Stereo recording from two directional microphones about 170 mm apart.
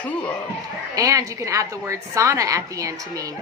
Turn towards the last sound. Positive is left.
turn(degrees=-20)  # may be behind; listen again after turning